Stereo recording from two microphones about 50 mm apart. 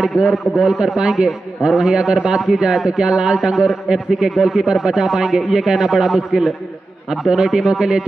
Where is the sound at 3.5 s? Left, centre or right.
Centre.